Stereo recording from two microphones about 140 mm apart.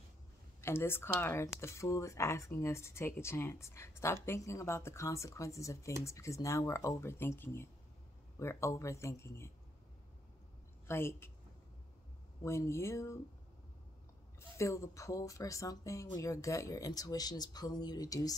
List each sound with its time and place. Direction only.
0.6 s speech: 15° left (ahead or behind)
10.9 s a woman's voice: 20° left (ahead or behind)
12.4 s speech: 20° left (ahead or behind)
14.6 s speech: 20° left (ahead or behind)